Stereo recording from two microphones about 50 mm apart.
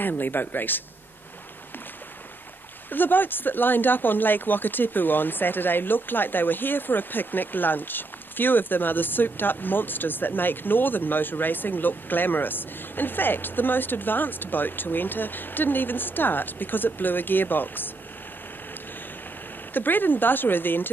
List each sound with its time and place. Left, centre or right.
0.0 s speech: left
2.9 s speech: left
19.7 s speech: left